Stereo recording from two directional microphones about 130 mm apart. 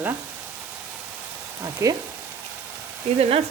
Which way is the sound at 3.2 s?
50° right (ahead or behind).